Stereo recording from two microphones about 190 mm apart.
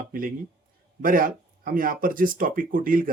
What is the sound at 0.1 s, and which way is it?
Speech, 45° right (ahead or behind).